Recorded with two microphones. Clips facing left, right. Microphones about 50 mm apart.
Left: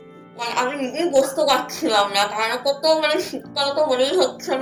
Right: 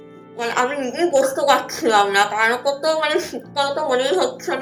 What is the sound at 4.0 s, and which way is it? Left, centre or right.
Speech, right.